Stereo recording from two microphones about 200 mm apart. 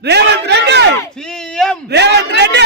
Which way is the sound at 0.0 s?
55° right (ahead or behind).